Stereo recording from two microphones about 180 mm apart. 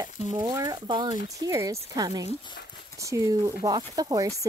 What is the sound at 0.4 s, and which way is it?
Speech, 20° right (ahead or behind).